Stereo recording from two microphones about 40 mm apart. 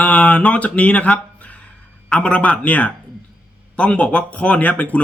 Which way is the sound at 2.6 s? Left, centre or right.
Left.